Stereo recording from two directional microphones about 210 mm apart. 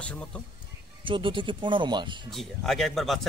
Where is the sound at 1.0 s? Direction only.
25° right (ahead or behind).